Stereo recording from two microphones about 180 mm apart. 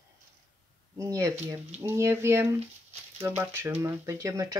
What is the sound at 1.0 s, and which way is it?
Speech, 15° right (ahead or behind).